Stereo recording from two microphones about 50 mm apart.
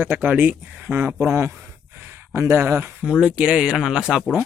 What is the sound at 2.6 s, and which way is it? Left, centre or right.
Speech, right.